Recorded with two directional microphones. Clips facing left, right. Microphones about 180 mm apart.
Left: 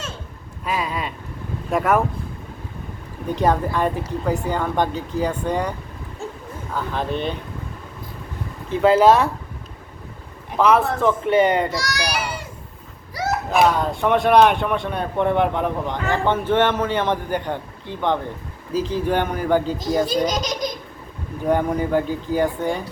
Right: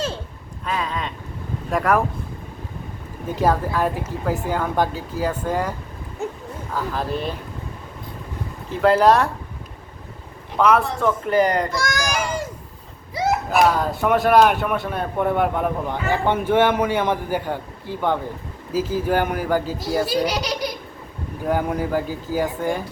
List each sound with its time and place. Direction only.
0.6 s a sound: 10° left (ahead or behind)
1.7 s speech: centre (ahead or behind)
3.3 s speech: centre (ahead or behind)
6.2 s a sound: 20° right (ahead or behind)
6.7 s speech: 5° right (ahead or behind)
8.7 s speech: centre (ahead or behind)
10.6 s speech: centre (ahead or behind)
11.7 s a sound: 50° right (ahead or behind)
13.5 s a man's voice: 5° right (ahead or behind)